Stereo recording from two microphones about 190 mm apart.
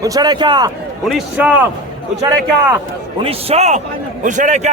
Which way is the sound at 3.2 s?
30° right (ahead or behind).